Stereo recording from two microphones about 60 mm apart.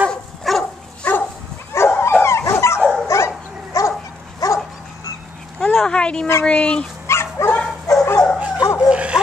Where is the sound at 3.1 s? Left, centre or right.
Left.